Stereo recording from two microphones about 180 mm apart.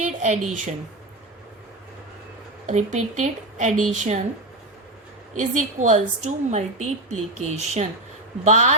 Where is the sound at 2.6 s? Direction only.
40° right (ahead or behind).